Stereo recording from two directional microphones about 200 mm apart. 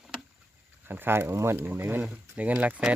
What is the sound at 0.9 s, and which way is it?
Speech, 10° right (ahead or behind).